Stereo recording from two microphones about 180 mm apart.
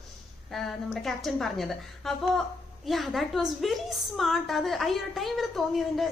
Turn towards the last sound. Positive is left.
turn(degrees=0)  # may be behind; listen again after turning